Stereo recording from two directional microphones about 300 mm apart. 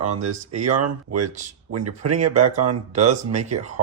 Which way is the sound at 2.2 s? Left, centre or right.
Right.